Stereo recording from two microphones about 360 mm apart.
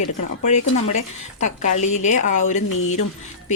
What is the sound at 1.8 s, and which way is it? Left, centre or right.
Speech, centre.